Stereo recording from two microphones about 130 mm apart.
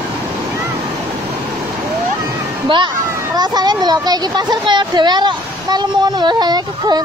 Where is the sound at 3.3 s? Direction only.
30° right (ahead or behind).